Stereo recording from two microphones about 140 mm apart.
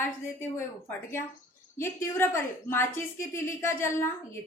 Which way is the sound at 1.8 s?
20° left (ahead or behind).